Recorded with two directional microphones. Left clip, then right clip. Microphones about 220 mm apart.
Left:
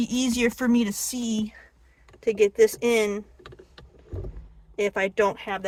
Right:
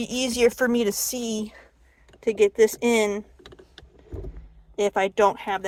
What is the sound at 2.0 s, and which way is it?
Typing, 10° right (ahead or behind).